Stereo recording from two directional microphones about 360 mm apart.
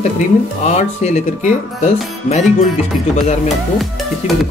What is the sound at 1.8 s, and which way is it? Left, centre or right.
Speech, centre.